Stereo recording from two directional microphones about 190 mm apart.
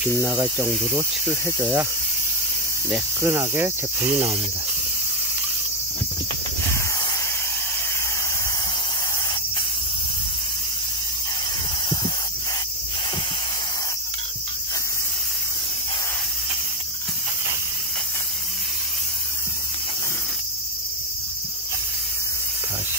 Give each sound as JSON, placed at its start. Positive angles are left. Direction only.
{"t": 0.2, "sound": "speech", "side_deg": -15}
{"t": 3.2, "sound": "speech", "side_deg": -15}